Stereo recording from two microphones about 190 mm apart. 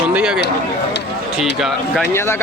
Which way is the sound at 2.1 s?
15° left (ahead or behind).